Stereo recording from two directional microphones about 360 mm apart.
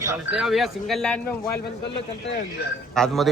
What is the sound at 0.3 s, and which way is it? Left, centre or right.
Speech, centre.